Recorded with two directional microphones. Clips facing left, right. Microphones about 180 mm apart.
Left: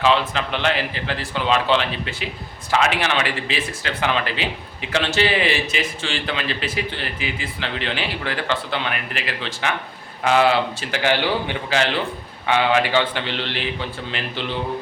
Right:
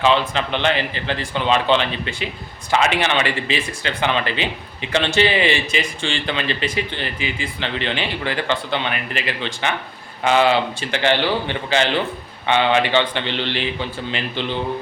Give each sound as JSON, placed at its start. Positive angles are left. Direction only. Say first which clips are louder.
{"t": 0.0, "sound": "a man's voice", "louder": "right 1 dB", "side_deg": 0}